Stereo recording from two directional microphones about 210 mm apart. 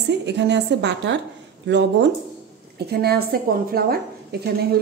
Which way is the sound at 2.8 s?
50° right (ahead or behind).